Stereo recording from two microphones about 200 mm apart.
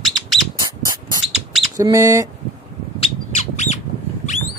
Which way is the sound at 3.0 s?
35° left (ahead or behind).